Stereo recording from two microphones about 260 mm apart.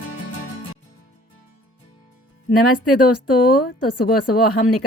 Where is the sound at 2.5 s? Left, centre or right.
Left.